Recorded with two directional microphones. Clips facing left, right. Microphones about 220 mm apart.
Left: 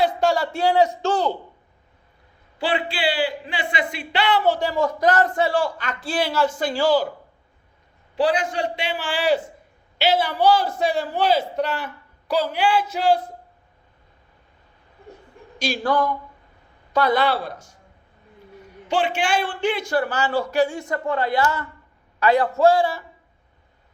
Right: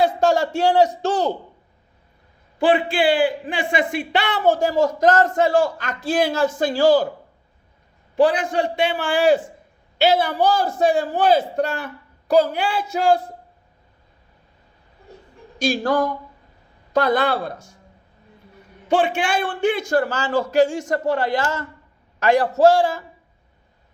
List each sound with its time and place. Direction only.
0.0 s a man's voice: 45° right (ahead or behind)
2.6 s speech: 50° right (ahead or behind)
8.1 s speech: 50° right (ahead or behind)
15.6 s speech: 45° right (ahead or behind)
19.1 s speech: 50° right (ahead or behind)
21.0 s a man's voice: 90° right
22.8 s speech: 45° right (ahead or behind)